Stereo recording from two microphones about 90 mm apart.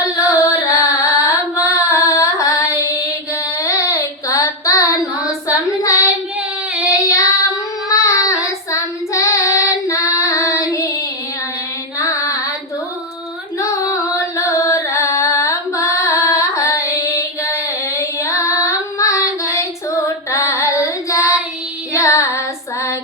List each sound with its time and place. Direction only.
0.2 s carnatic music: 40° left (ahead or behind)
1.6 s female singing: 35° left (ahead or behind)
3.6 s child singing: 35° left (ahead or behind)
6.8 s child singing: 40° left (ahead or behind)
11.9 s music: 35° left (ahead or behind)
13.6 s carnatic music: 35° left (ahead or behind)
20.3 s child singing: 35° left (ahead or behind)